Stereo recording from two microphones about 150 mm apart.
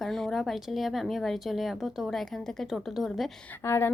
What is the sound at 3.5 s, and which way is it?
Speech, 15° left (ahead or behind).